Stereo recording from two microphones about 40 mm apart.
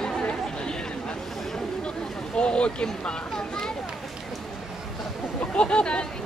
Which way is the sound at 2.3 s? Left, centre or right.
Left.